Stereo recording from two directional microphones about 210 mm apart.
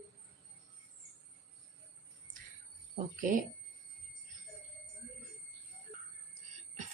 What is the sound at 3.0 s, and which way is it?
Speech, 35° right (ahead or behind).